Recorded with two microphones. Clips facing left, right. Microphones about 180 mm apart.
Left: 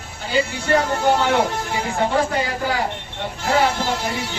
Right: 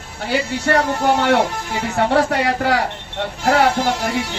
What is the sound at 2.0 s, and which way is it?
Speech, 70° right (ahead or behind).